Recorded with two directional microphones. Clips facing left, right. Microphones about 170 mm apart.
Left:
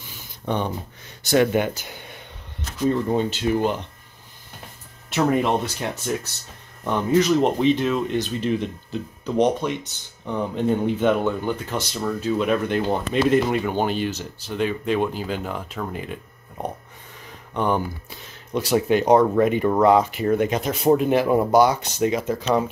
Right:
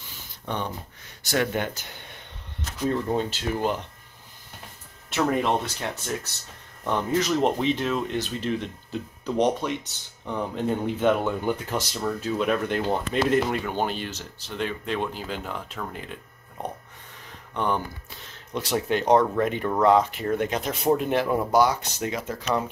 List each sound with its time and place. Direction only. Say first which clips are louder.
1.2 s speech: left 7 dB; 20° left (ahead or behind)
1.9 s a sound: left 4 dB; 5° left (ahead or behind)
2.9 s speech: left 4 dB; centre (ahead or behind)
5.1 s speech: left 3 dB; 10° left (ahead or behind)
17.6 s speech: left 4 dB; 10° left (ahead or behind)
21.3 s speech: left 4 dB; 20° left (ahead or behind)